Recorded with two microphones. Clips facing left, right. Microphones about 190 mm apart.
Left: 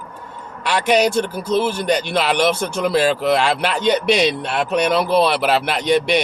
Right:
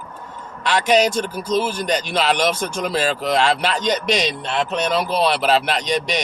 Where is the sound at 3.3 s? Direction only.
10° left (ahead or behind).